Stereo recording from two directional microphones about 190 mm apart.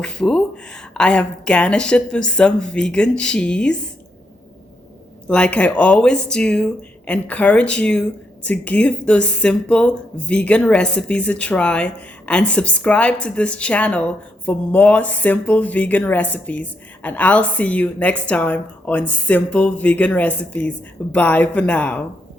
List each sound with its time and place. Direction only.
0.0 s a woman's voice: 5° left (ahead or behind)
5.3 s a woman's voice: 5° left (ahead or behind)